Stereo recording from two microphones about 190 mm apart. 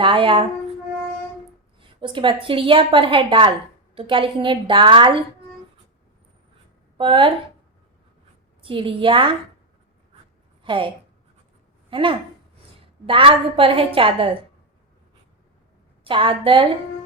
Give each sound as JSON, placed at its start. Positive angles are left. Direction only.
{"t": 0.0, "sound": "a woman's voice", "side_deg": -25}
{"t": 1.8, "sound": "a woman's voice", "side_deg": -25}
{"t": 6.9, "sound": "a woman's voice", "side_deg": -25}
{"t": 8.6, "sound": "a woman's voice", "side_deg": -25}
{"t": 10.6, "sound": "a woman's voice", "side_deg": -25}
{"t": 16.0, "sound": "a woman's voice", "side_deg": -25}